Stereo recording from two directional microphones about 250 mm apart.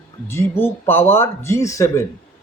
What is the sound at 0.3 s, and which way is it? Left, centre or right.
A man's voice, centre.